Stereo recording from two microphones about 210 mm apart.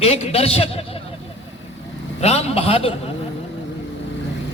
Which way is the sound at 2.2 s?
30° left (ahead or behind).